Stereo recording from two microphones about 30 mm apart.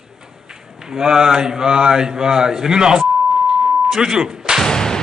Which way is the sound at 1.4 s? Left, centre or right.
Right.